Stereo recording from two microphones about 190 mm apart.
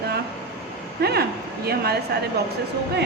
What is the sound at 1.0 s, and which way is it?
Speech, 55° right (ahead or behind).